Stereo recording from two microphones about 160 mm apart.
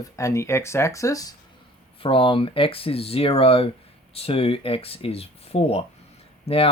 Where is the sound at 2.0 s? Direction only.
35° left (ahead or behind).